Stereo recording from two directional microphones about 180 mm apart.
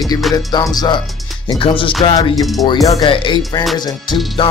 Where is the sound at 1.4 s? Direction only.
30° left (ahead or behind).